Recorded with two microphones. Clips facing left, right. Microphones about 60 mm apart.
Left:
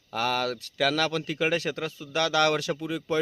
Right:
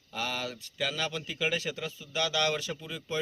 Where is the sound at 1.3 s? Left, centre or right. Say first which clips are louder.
Left 5 dB; left.